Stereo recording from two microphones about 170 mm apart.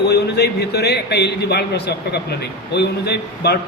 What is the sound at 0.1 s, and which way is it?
A man's voice, 75° left (ahead or behind).